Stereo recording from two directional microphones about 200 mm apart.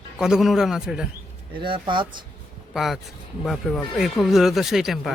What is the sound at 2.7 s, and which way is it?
Speech, centre (ahead or behind).